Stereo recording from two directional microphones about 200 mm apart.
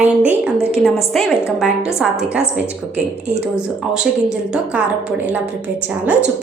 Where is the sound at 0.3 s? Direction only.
5° right (ahead or behind).